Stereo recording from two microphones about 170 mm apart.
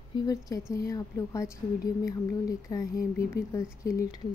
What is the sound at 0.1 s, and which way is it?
Speech, 20° left (ahead or behind).